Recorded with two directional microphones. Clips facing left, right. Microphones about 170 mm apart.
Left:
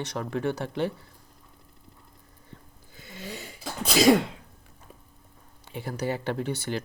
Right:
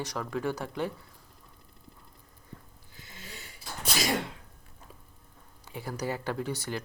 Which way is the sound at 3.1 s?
75° left (ahead or behind).